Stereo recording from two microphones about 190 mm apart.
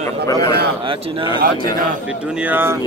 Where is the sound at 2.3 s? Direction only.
10° right (ahead or behind).